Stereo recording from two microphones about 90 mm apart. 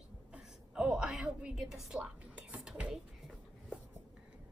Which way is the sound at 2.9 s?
5° right (ahead or behind).